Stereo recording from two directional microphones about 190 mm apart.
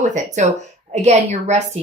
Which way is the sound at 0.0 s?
40° right (ahead or behind).